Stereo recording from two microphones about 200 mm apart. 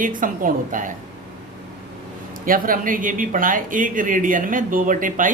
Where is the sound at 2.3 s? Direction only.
45° right (ahead or behind).